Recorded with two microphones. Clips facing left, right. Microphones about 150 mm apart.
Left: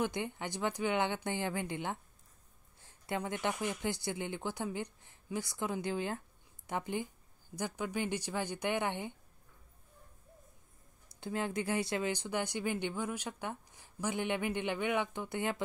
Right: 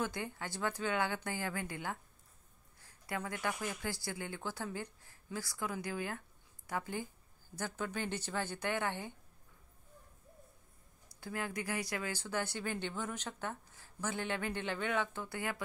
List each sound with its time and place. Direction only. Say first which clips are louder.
0.0 s speech: left 3 dB; 20° left (ahead or behind)
11.1 s speech: left 4 dB; 20° left (ahead or behind)